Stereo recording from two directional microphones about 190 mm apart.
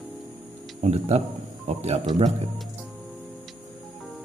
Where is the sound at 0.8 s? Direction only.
35° right (ahead or behind).